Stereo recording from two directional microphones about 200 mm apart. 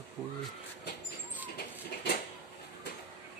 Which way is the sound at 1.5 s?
55° left (ahead or behind).